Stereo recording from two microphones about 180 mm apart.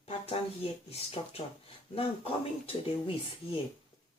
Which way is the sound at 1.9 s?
30° left (ahead or behind).